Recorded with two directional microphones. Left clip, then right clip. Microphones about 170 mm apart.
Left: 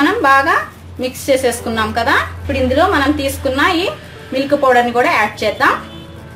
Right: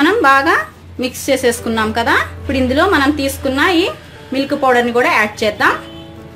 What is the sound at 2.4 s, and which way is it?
Speech, 60° right (ahead or behind).